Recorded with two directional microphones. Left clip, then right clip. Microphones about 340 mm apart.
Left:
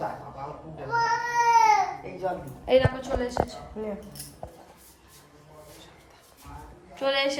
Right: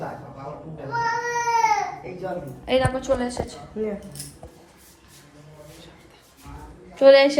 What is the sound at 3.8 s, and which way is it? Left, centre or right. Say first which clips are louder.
Speech: right 7 dB; centre.